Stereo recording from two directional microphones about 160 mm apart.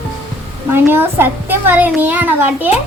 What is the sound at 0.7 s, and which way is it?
A child's voice, 15° right (ahead or behind).